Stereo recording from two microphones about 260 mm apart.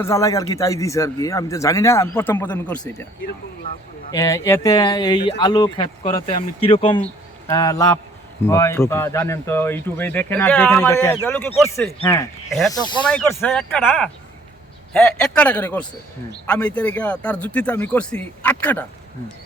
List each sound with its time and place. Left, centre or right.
0.0 s speech: centre
4.1 s speech: centre
12.5 s a man's voice: centre